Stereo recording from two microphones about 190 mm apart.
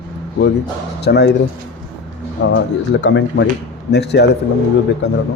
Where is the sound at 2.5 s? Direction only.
70° left (ahead or behind).